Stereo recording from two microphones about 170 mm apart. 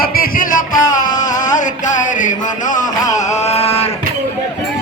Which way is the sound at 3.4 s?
35° left (ahead or behind).